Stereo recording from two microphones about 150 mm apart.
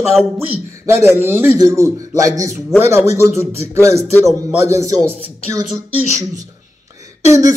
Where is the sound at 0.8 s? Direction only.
15° right (ahead or behind).